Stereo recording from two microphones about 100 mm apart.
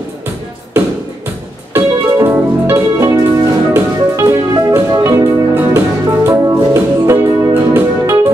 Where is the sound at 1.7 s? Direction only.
25° right (ahead or behind).